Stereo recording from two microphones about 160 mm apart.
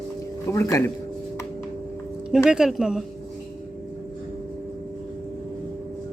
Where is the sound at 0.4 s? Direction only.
20° left (ahead or behind).